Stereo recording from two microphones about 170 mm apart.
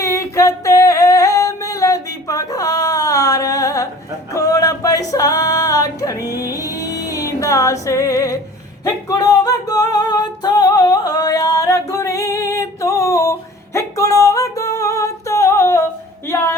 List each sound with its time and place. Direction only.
0.0 s female singing: 20° left (ahead or behind)
4.4 s a sound: 20° left (ahead or behind)
6.5 s music: 20° left (ahead or behind)
8.8 s singing: 20° left (ahead or behind)
13.7 s music: 20° left (ahead or behind)
16.3 s a sound: 15° left (ahead or behind)